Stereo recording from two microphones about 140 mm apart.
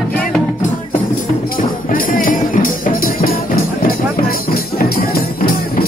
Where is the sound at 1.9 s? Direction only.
85° left.